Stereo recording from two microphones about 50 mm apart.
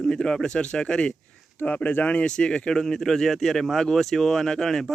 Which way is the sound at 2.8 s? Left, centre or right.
Centre.